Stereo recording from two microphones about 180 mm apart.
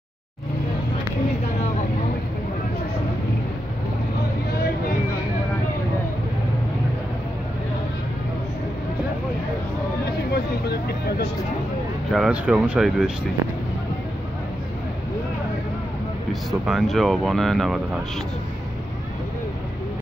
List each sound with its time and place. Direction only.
10.3 s vehicle: 60° left (ahead or behind)
12.1 s speech: 5° right (ahead or behind)
16.4 s speech: centre (ahead or behind)